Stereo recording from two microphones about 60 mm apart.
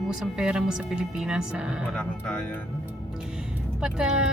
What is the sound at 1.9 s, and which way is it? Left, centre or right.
Speech, centre.